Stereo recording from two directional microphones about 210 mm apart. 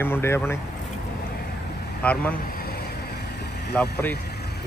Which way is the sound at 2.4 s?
45° left (ahead or behind).